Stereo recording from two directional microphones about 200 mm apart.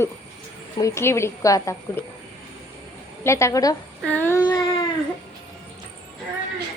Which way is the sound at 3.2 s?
15° left (ahead or behind).